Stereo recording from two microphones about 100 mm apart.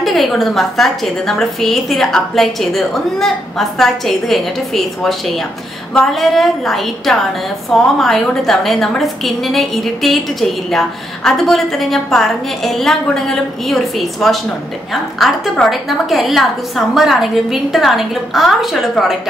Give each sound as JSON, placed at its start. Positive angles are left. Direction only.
{"t": 0.0, "sound": "a woman's voice", "side_deg": 0}